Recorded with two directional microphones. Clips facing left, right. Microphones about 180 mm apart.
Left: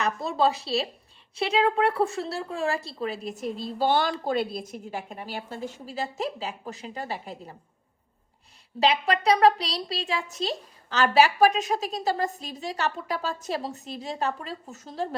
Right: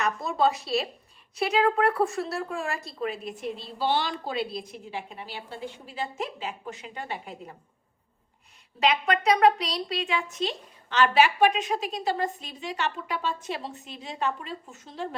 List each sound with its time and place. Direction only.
0.0 s a woman's voice: 30° left (ahead or behind)
8.8 s a woman's voice: 30° left (ahead or behind)